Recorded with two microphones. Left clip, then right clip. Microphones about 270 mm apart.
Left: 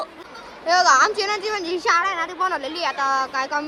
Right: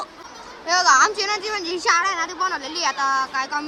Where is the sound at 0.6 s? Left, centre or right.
Centre.